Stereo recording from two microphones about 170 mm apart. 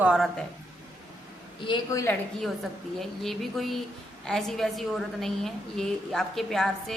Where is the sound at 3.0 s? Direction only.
Centre (ahead or behind).